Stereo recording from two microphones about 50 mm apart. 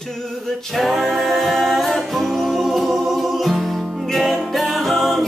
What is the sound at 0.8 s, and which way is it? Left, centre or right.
Music, centre.